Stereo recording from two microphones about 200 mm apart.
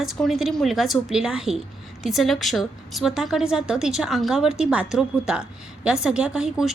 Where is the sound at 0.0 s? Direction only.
Centre (ahead or behind).